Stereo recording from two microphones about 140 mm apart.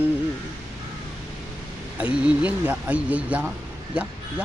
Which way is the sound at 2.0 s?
10° right (ahead or behind).